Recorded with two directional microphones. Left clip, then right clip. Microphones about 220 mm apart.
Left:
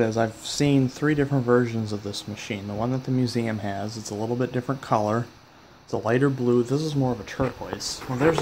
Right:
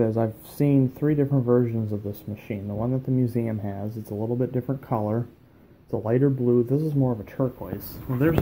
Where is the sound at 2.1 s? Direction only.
5° left (ahead or behind).